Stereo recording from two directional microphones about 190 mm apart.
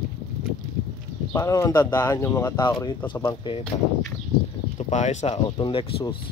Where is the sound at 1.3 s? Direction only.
15° left (ahead or behind).